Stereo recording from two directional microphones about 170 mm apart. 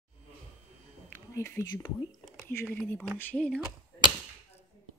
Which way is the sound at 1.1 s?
15° left (ahead or behind).